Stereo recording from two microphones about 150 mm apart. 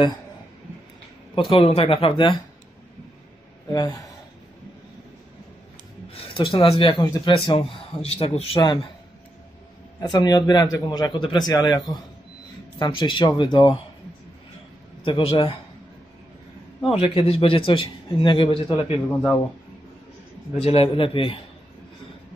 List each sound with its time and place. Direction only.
1.3 s speech: 35° left (ahead or behind)
3.7 s speech: 25° left (ahead or behind)
6.3 s speech: 35° left (ahead or behind)
10.1 s speech: 25° left (ahead or behind)
15.0 s speech: 35° left (ahead or behind)
17.0 s speech: 40° left (ahead or behind)
20.5 s speech: 40° left (ahead or behind)